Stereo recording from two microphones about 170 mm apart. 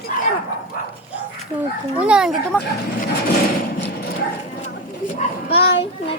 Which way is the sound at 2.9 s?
55° left (ahead or behind).